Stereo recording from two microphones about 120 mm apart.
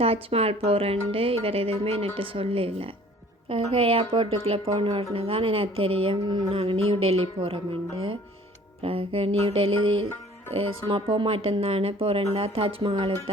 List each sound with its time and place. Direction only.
0.0 s a woman's voice: 55° right (ahead or behind); by 6.5 s 35° right (ahead or behind)
6.5 s a woman's voice: 50° right (ahead or behind)
8.8 s a woman's voice: 50° right (ahead or behind)